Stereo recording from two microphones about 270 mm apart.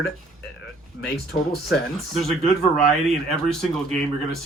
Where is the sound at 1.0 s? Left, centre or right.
Left.